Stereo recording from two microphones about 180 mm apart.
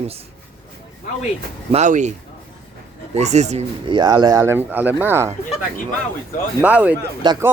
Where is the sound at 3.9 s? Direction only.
25° right (ahead or behind).